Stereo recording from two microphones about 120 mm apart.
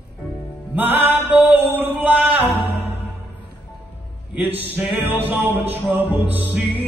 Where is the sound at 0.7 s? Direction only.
15° right (ahead or behind).